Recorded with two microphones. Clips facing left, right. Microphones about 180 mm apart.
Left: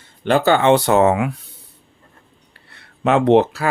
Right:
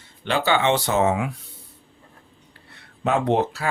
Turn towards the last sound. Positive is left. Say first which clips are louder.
# left 8 dB
turn(degrees=80)